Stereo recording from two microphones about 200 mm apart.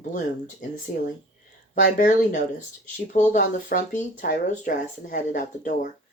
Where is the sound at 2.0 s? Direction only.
40° left (ahead or behind).